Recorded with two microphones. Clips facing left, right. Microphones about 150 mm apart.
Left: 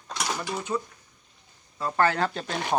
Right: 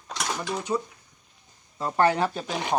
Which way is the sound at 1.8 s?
15° right (ahead or behind).